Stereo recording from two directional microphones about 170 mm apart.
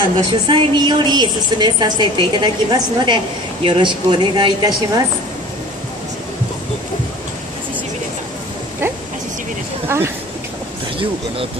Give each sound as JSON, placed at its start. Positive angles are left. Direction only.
{"t": 0.3, "sound": "a woman's voice", "side_deg": -25}
{"t": 9.8, "sound": "speech", "side_deg": -15}